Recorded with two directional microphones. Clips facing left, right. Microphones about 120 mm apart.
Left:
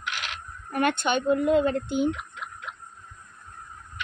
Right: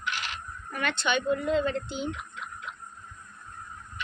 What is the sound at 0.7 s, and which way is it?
Speech, 50° left (ahead or behind).